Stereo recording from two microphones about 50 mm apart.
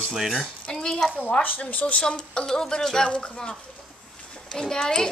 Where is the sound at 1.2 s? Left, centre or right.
Left.